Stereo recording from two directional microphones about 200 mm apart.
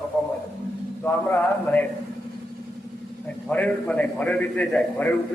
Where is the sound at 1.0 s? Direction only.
10° left (ahead or behind).